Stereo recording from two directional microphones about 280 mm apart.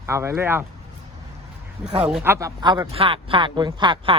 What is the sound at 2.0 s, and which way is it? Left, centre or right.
A man's voice, centre.